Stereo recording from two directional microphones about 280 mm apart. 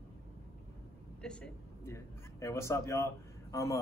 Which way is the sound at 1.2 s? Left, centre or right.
Centre.